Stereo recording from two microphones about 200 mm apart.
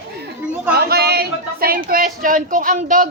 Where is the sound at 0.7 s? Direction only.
55° right (ahead or behind).